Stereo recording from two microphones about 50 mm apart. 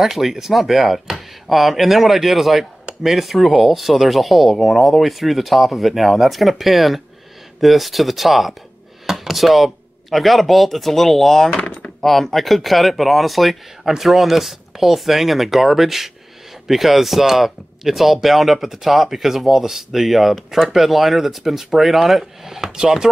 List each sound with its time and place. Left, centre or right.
0.0 s speech: centre
11.5 s speech: left
12.0 s speech: centre